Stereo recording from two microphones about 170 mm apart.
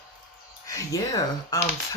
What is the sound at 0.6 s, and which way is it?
Speech, 20° left (ahead or behind).